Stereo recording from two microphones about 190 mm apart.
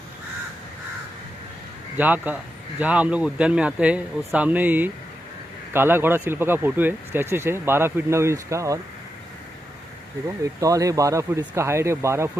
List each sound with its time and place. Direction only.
2.0 s speech: 10° right (ahead or behind)
10.4 s speech: 15° right (ahead or behind)